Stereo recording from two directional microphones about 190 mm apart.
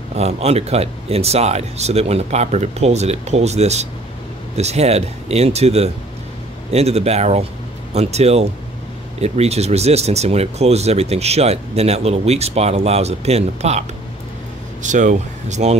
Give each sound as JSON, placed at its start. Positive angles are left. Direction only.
{"t": 0.1, "sound": "speech", "side_deg": -35}